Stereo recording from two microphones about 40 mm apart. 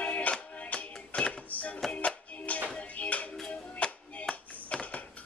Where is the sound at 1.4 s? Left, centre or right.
Left.